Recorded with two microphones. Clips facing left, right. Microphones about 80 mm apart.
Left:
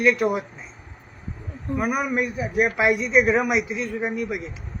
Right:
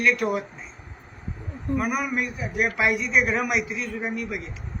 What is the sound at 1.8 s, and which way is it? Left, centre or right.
A man's voice, centre.